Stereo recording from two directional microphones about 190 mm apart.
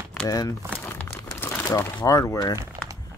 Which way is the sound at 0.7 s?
10° left (ahead or behind).